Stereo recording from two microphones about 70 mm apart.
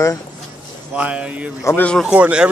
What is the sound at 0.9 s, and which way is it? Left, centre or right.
A man's voice, centre.